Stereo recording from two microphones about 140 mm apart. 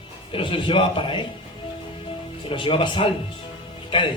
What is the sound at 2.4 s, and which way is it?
Speech, 40° left (ahead or behind).